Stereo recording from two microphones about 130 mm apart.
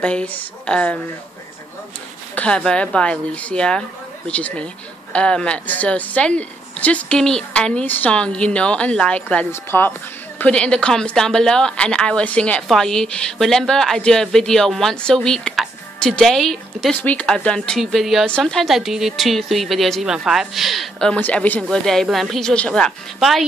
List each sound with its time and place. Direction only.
0.0 s speech: 10° left (ahead or behind)
2.3 s a woman's voice: 10° left (ahead or behind)